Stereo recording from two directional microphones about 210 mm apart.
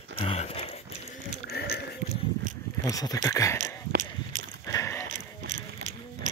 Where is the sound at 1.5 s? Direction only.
50° left (ahead or behind).